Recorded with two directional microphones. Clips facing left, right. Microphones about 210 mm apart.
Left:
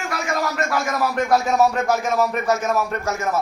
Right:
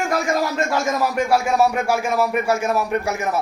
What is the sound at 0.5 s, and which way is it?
Speech, 25° right (ahead or behind).